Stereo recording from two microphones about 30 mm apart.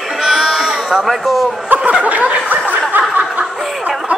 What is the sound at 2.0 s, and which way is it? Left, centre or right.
Chuckle, right.